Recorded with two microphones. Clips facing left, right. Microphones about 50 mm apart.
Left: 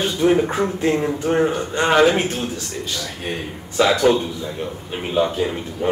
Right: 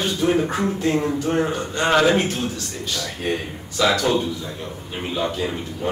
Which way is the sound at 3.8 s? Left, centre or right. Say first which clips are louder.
Left 3 dB; left.